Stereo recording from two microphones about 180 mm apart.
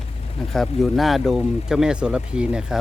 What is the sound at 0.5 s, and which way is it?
Speech, centre (ahead or behind).